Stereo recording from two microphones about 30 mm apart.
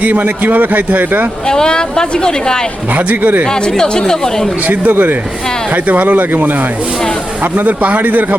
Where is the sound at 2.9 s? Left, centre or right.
Right.